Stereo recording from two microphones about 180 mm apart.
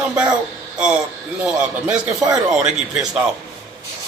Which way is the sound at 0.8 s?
5° right (ahead or behind).